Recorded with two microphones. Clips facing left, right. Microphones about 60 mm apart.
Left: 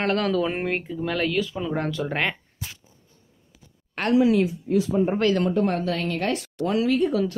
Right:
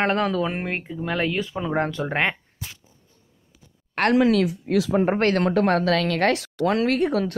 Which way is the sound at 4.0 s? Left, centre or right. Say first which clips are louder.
Right 1 dB; right.